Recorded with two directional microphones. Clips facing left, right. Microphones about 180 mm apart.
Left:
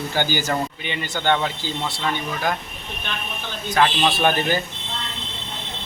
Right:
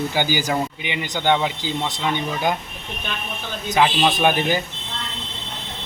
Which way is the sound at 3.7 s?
15° right (ahead or behind).